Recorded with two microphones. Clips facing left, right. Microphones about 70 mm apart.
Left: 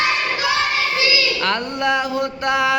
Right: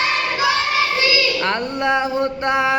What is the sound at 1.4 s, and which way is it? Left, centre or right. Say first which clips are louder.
Music: even; right.